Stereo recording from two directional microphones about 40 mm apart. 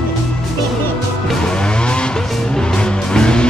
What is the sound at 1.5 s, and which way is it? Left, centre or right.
Music, left.